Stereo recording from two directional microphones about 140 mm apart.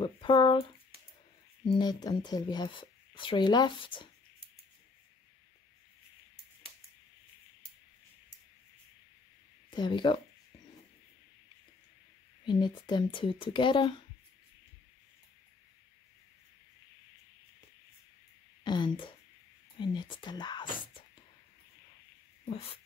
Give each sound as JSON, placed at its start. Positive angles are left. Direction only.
{"t": 0.0, "sound": "speech", "side_deg": 35}
{"t": 1.8, "sound": "speech", "side_deg": 30}
{"t": 9.7, "sound": "speech", "side_deg": 35}
{"t": 12.4, "sound": "speech", "side_deg": 35}
{"t": 18.6, "sound": "speech", "side_deg": 35}